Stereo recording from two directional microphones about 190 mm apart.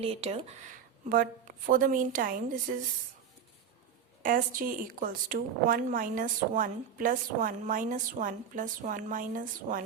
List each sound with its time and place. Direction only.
0.0 s speech: 30° right (ahead or behind)
1.1 s speech: 45° right (ahead or behind)
4.2 s speech: 45° right (ahead or behind)